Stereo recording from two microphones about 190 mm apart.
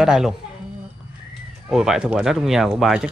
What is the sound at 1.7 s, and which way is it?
Speech, centre (ahead or behind).